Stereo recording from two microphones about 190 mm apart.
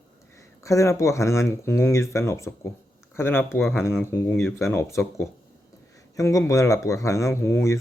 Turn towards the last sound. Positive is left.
turn(degrees=15)  # may be behind; listen again after turning